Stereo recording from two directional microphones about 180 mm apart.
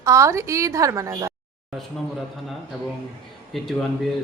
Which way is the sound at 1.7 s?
Centre (ahead or behind).